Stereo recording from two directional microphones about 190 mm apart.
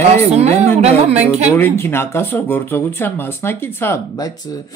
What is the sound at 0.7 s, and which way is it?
Speech, 35° right (ahead or behind).